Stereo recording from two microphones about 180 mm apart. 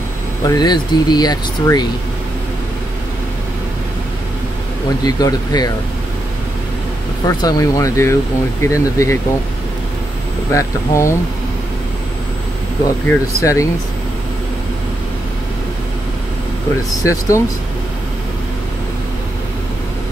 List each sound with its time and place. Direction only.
0.5 s speech: 25° left (ahead or behind)
5.0 s speech: 20° left (ahead or behind)
7.2 s speech: 20° left (ahead or behind)
10.5 s speech: 15° left (ahead or behind)
13.1 s speech: 15° left (ahead or behind)
17.0 s speech: 20° left (ahead or behind)